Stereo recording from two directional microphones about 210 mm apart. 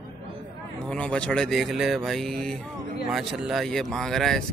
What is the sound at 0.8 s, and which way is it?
Speech, 5° left (ahead or behind).